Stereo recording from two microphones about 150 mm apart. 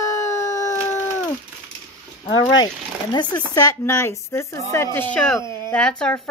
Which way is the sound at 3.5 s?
20° left (ahead or behind).